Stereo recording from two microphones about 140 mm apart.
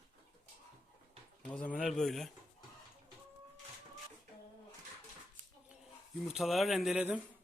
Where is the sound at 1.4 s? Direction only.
10° left (ahead or behind).